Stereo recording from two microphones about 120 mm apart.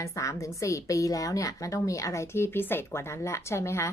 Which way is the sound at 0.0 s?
25° left (ahead or behind).